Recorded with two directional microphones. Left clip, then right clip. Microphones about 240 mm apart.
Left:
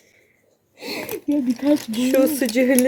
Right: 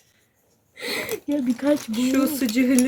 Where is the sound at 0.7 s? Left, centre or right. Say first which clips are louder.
Right 1 dB; right.